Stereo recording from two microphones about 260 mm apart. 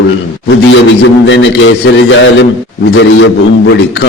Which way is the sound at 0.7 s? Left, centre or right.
Left.